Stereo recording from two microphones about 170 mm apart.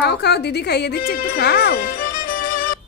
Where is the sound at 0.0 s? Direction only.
75° left (ahead or behind); by 2.4 s 60° left (ahead or behind).